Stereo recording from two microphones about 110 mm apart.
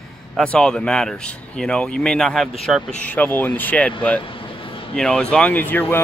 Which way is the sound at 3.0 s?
15° left (ahead or behind).